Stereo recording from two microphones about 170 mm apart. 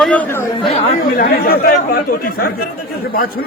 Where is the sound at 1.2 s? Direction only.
60° left (ahead or behind).